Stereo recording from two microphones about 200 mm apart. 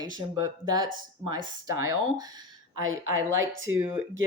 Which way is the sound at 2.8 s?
80° right.